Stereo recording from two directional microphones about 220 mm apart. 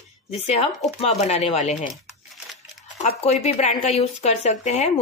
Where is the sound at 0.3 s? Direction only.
30° left (ahead or behind).